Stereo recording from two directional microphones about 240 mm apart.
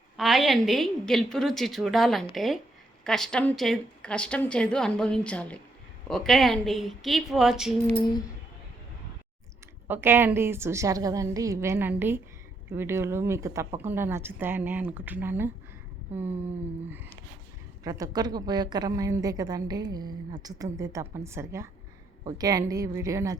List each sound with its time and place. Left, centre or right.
0.2 s a woman's voice: centre
7.9 s a sound: centre
9.8 s a woman's voice: centre
17.8 s a woman's voice: centre